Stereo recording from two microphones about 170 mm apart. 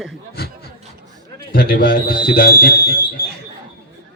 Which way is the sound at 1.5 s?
55° left (ahead or behind).